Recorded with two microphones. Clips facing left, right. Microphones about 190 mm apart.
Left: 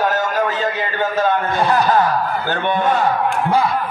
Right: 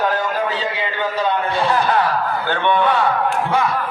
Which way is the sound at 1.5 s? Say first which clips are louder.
Left 2 dB; 40° left (ahead or behind).